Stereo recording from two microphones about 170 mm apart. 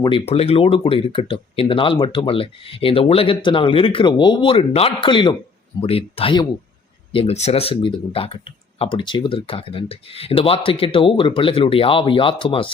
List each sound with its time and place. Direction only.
0.3 s a man's voice: 35° left (ahead or behind)